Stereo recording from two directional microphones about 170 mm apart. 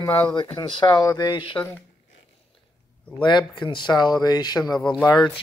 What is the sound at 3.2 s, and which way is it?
Speech, 25° left (ahead or behind).